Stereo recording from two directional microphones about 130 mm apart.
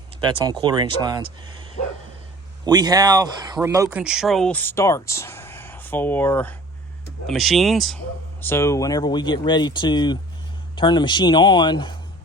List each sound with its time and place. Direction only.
0.2 s speech: 35° right (ahead or behind)
2.6 s speech: 30° right (ahead or behind)
3.9 s speech: 5° right (ahead or behind); by 6.6 s 15° left (ahead or behind)
7.3 s speech: centre (ahead or behind)
8.4 s speech: 20° left (ahead or behind); by 11.9 s 35° left (ahead or behind)